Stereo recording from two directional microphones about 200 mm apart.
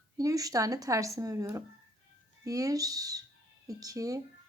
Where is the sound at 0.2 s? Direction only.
15° right (ahead or behind).